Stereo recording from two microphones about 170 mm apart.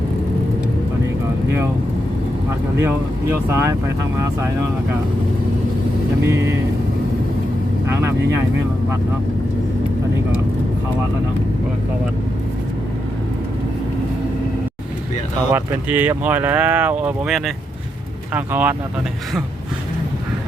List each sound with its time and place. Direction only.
2.7 s speech: 15° right (ahead or behind)
6.2 s speech: 15° right (ahead or behind)
15.5 s speech: 10° right (ahead or behind)